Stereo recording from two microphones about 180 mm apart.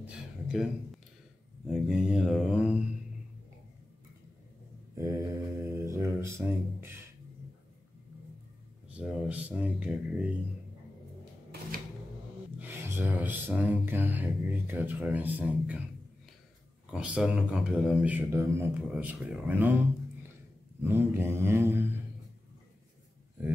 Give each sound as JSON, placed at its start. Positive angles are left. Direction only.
{"t": 0.0, "sound": "a sound", "side_deg": 0}
{"t": 1.7, "sound": "mantra", "side_deg": -5}
{"t": 4.9, "sound": "mantra", "side_deg": -15}
{"t": 8.9, "sound": "a man's voice", "side_deg": -5}
{"t": 12.5, "sound": "a sound", "side_deg": -10}
{"t": 13.6, "sound": "a man's voice", "side_deg": -10}
{"t": 16.9, "sound": "a man's voice", "side_deg": -5}
{"t": 20.8, "sound": "a man's voice", "side_deg": -10}